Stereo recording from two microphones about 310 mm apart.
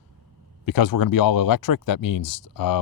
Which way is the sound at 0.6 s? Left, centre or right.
Left.